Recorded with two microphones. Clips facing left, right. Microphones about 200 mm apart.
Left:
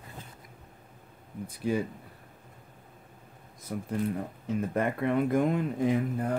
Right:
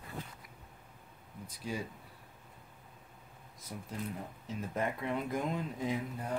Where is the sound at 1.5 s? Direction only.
55° left (ahead or behind).